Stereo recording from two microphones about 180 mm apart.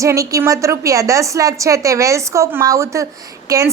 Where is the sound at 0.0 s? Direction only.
15° right (ahead or behind).